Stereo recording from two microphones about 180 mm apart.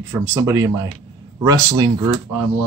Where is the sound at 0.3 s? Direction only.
15° right (ahead or behind).